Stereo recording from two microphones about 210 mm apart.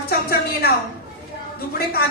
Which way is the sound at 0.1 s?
45° left (ahead or behind).